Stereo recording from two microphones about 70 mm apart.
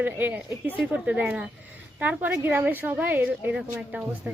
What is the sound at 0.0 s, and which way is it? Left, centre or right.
Speech, right.